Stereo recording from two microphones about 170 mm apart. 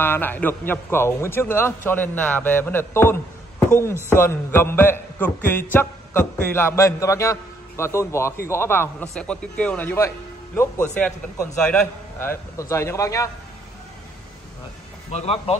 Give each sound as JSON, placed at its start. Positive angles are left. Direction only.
{"t": 0.0, "sound": "a man's voice", "side_deg": 10}
{"t": 15.0, "sound": "speech", "side_deg": 35}